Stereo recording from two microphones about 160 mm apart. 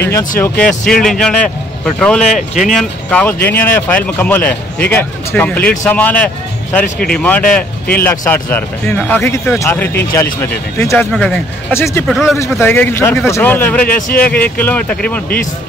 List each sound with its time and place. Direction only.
0.4 s speech: 5° left (ahead or behind)
2.3 s speech: 50° left (ahead or behind)
2.7 s speech: 5° left (ahead or behind)
12.5 s speech: 10° left (ahead or behind)
13.9 s speech: 60° left (ahead or behind)
14.4 s speech: 10° left (ahead or behind)